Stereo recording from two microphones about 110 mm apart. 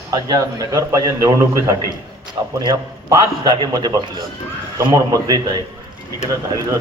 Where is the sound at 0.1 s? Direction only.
35° right (ahead or behind).